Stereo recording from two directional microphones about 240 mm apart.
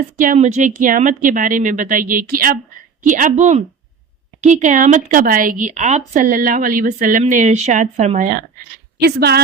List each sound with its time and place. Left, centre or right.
0.2 s a woman's voice: right